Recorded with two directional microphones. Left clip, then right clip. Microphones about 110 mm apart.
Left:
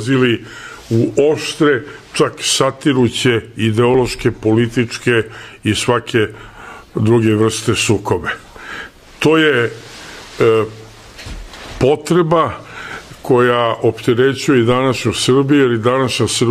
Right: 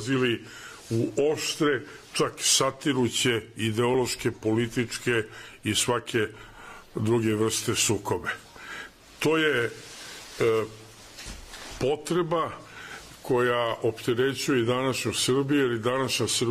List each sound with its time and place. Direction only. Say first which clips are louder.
0.0 s a man's voice: left 11 dB; 20° left (ahead or behind)
11.8 s speech: left 13 dB; 45° left (ahead or behind)